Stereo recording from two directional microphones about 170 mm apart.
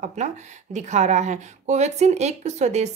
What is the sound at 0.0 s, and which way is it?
A woman's voice, 45° right (ahead or behind).